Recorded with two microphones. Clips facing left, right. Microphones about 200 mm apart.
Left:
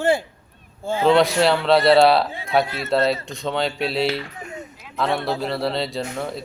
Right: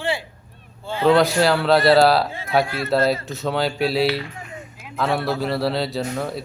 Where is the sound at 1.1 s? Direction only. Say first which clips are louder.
Even; centre (ahead or behind).